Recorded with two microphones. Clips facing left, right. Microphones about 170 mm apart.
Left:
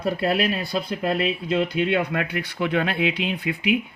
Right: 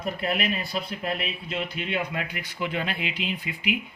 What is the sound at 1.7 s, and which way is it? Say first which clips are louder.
Speech: left 8 dB; 80° left.